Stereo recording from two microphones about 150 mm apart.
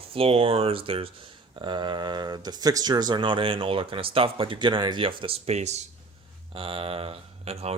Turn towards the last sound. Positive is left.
turn(degrees=-45)  # may be behind; listen again after turning